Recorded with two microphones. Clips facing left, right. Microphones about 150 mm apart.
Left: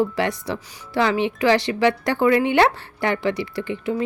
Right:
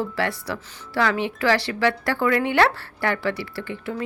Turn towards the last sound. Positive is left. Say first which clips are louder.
# left 5 dB
turn(degrees=20)  # may be behind; listen again after turning